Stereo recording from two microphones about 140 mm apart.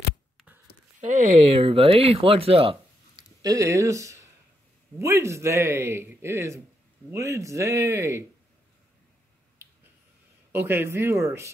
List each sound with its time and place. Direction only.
1.0 s speech: 65° right (ahead or behind)
1.5 s speech: 40° right (ahead or behind)
3.4 s a man's voice: 20° right (ahead or behind)
10.5 s a man's voice: 15° right (ahead or behind)